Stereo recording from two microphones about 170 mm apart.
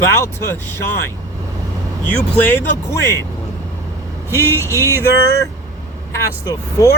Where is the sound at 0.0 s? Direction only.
15° left (ahead or behind).